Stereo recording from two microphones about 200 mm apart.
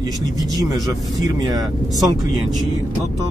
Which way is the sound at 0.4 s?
20° right (ahead or behind).